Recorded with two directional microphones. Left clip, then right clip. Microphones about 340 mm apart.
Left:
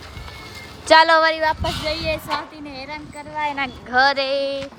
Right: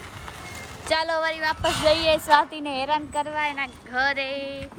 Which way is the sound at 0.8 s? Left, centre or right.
Left.